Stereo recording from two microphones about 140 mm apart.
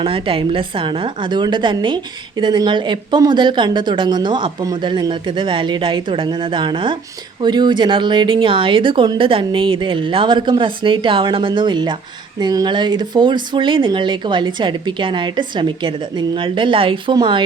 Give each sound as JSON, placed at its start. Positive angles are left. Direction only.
{"t": 0.0, "sound": "a woman's voice", "side_deg": -40}